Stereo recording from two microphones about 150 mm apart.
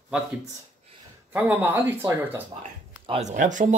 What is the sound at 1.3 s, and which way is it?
Speech, 10° right (ahead or behind).